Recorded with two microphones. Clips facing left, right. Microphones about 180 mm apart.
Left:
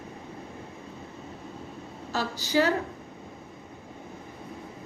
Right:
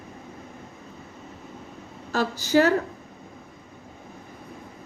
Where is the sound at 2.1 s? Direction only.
50° right (ahead or behind).